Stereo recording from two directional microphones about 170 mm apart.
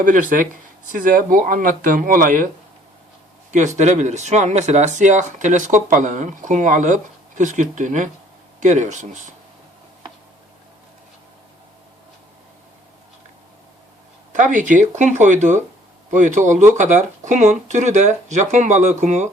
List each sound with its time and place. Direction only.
0.0 s speech: 50° right (ahead or behind)
3.5 s speech: 45° right (ahead or behind)
14.3 s speech: 50° right (ahead or behind)